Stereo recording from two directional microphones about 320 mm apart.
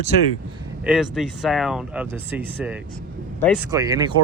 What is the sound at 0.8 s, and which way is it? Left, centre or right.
Speech, centre.